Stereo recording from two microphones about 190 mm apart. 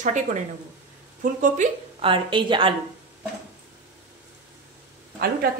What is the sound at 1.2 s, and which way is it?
Speech, 45° right (ahead or behind).